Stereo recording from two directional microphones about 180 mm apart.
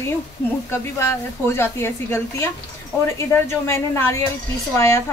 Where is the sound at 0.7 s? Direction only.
15° left (ahead or behind).